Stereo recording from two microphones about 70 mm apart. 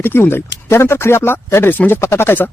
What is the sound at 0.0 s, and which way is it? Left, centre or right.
Speech, left.